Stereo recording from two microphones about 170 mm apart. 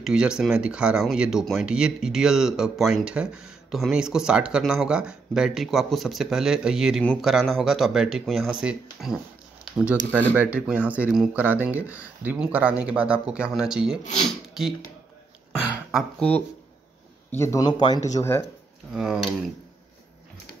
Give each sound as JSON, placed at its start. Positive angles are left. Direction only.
{"t": 0.0, "sound": "speech", "side_deg": -5}
{"t": 15.5, "sound": "a sound", "side_deg": -5}
{"t": 16.2, "sound": "speech", "side_deg": 5}
{"t": 18.9, "sound": "speech", "side_deg": -5}